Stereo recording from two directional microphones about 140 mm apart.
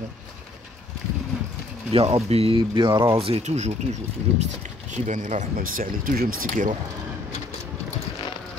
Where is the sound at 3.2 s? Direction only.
45° right (ahead or behind); by 6.7 s 75° right (ahead or behind).